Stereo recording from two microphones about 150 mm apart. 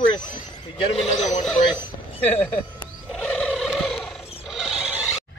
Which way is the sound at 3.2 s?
5° left (ahead or behind).